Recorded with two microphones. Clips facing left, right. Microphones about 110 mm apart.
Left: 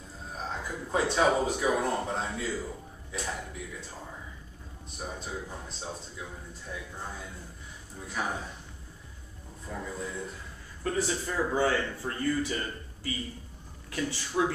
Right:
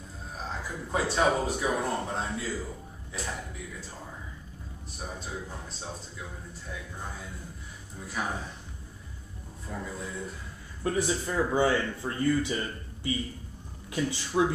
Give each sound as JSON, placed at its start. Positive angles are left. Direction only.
{"t": 0.4, "sound": "speech", "side_deg": 0}
{"t": 5.0, "sound": "speech", "side_deg": 0}
{"t": 9.7, "sound": "speech", "side_deg": 0}
{"t": 10.8, "sound": "speech", "side_deg": -15}
{"t": 13.8, "sound": "speech", "side_deg": -15}